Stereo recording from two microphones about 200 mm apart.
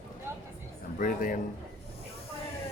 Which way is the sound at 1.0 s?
45° left (ahead or behind).